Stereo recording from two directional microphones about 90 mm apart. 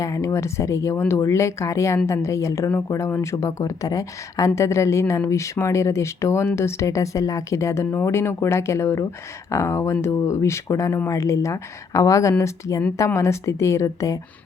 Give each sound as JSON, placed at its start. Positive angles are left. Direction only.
{"t": 0.0, "sound": "speech", "side_deg": 35}
{"t": 3.3, "sound": "speech", "side_deg": 40}